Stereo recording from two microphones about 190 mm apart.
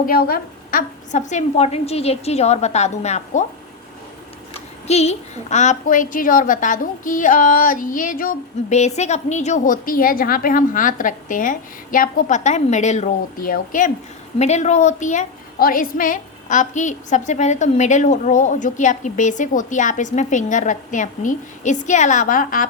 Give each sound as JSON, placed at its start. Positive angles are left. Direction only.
{"t": 0.0, "sound": "a woman's voice", "side_deg": 50}
{"t": 4.9, "sound": "a woman's voice", "side_deg": 35}